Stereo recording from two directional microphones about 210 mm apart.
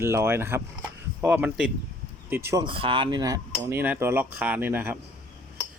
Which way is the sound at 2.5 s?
20° right (ahead or behind).